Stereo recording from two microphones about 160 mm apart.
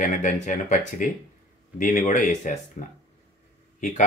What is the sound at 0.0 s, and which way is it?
Speech, 50° left (ahead or behind).